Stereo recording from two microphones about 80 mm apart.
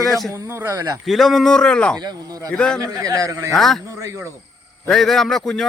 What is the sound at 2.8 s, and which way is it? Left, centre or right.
Speech, right.